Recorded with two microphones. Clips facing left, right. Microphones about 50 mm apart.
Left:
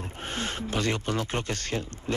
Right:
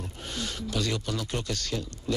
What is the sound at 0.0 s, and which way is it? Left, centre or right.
Speech, left.